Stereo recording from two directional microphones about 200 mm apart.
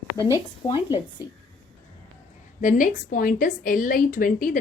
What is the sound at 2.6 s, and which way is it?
A woman's voice, 40° left (ahead or behind).